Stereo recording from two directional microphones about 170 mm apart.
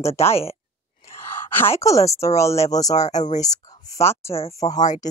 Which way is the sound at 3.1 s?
45° left (ahead or behind).